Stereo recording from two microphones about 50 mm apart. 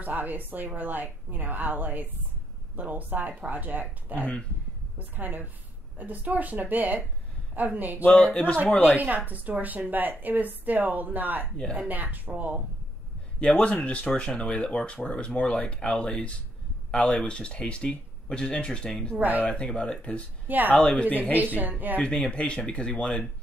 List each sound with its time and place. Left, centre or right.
0.0 s a woman's voice: right
8.1 s speech: centre
8.9 s a woman's voice: right
13.4 s speech: left
19.1 s a woman's voice: right
19.4 s speech: left
20.4 s speech: right
20.7 s speech: left
21.5 s a woman's voice: right
22.0 s speech: centre